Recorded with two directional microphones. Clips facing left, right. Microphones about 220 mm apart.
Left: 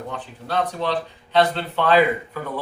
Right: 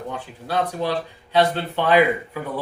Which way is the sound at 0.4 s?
10° right (ahead or behind).